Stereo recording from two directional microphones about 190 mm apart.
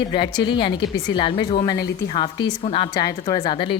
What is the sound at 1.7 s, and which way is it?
Speech, 60° left (ahead or behind).